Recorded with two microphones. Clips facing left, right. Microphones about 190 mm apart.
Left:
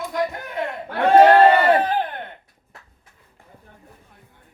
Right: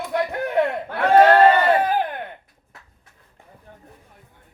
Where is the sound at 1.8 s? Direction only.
10° right (ahead or behind).